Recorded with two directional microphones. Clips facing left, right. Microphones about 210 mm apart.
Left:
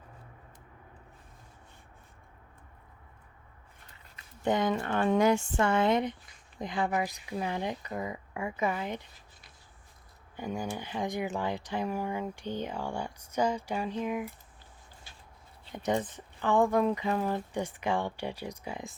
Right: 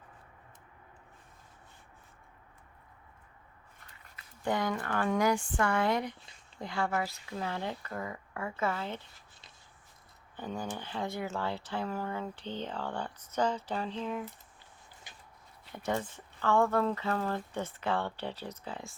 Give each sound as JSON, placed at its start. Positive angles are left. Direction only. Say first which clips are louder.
{"t": 4.4, "sound": "speech", "louder": "left 4 dB", "side_deg": 20}
{"t": 10.3, "sound": "speech", "louder": "left 3 dB", "side_deg": 10}
{"t": 15.1, "sound": "a sound", "louder": "right 2 dB", "side_deg": -15}
{"t": 15.7, "sound": "speech", "louder": "left 4 dB", "side_deg": 20}